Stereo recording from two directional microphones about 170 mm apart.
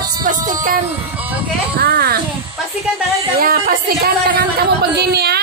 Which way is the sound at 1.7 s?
60° right (ahead or behind).